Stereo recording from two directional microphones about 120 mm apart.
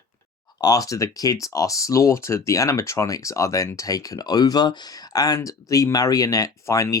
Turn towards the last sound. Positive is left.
turn(degrees=25)  # may be behind; listen again after turning